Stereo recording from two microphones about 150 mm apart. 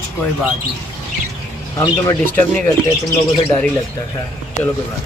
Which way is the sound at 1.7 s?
25° left (ahead or behind).